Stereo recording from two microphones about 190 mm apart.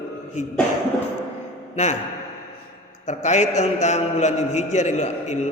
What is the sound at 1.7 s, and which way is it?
Speech, 40° left (ahead or behind).